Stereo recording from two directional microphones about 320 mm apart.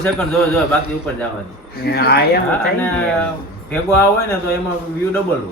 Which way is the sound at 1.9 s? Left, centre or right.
Left.